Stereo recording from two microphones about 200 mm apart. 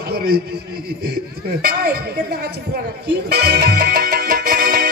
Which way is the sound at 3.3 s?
50° right (ahead or behind).